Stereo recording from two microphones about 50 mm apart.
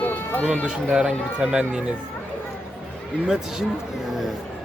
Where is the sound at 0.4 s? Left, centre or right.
Right.